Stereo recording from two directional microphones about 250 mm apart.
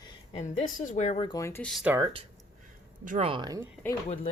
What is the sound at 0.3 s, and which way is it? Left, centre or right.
Speech, left.